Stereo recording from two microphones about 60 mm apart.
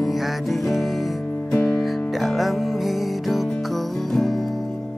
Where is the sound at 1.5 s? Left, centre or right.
Centre.